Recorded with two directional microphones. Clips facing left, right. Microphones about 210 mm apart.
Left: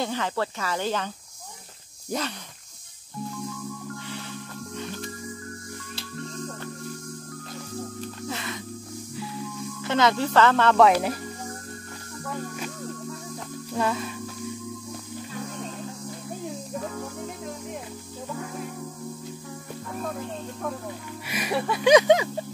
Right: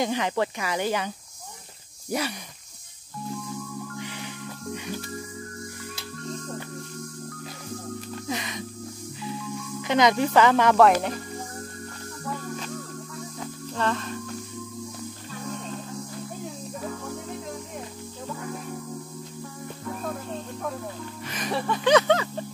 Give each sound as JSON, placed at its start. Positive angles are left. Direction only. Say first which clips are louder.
{"t": 0.0, "sound": "speech", "louder": "right 2 dB", "side_deg": -15}
{"t": 8.3, "sound": "music", "louder": "right 3 dB", "side_deg": -15}
{"t": 9.8, "sound": "speech", "louder": "right 2 dB", "side_deg": -15}
{"t": 10.8, "sound": "speech", "louder": "left 1 dB", "side_deg": 5}
{"t": 13.7, "sound": "speech", "louder": "left 1 dB", "side_deg": 10}
{"t": 21.3, "sound": "speech", "louder": "left 1 dB", "side_deg": 10}